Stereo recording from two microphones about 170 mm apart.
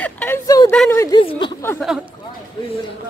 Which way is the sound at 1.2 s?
30° left (ahead or behind).